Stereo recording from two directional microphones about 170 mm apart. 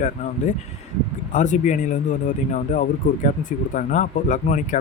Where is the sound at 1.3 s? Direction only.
45° left (ahead or behind).